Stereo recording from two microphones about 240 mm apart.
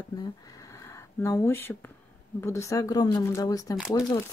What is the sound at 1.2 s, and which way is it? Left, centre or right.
Speech, centre.